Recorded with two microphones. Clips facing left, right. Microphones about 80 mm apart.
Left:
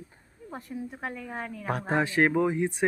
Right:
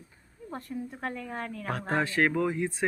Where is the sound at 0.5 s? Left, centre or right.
Centre.